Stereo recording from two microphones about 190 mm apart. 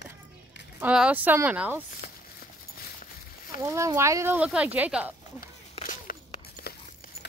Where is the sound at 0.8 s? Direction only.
5° right (ahead or behind).